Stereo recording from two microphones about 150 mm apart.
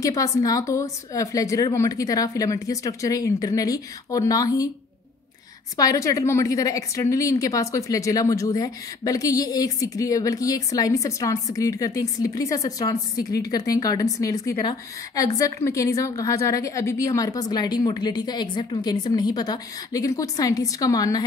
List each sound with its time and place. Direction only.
0.0 s a woman's voice: 20° left (ahead or behind)
5.8 s a woman's voice: 20° left (ahead or behind)